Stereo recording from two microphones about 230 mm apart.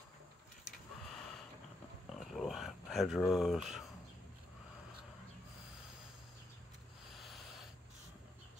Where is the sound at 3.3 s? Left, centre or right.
Centre.